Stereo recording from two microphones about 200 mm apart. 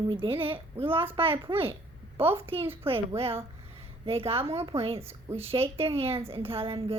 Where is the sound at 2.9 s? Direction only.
30° right (ahead or behind).